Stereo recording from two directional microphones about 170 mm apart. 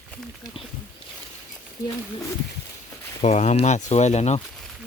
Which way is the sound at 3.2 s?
45° left (ahead or behind).